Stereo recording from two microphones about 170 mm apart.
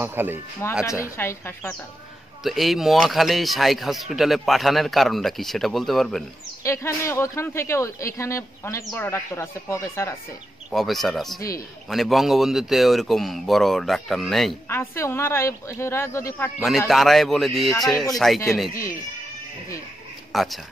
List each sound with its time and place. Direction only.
0.0 s speech: 10° right (ahead or behind)
0.8 s speech: 15° left (ahead or behind)
2.4 s speech: centre (ahead or behind)
6.6 s speech: 15° left (ahead or behind)
10.7 s speech: centre (ahead or behind)
14.7 s speech: 15° left (ahead or behind)
16.5 s speech: centre (ahead or behind)
20.3 s speech: centre (ahead or behind)